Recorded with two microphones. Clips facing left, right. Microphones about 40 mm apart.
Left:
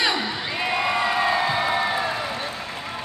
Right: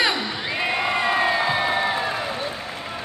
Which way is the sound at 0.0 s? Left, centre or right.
Centre.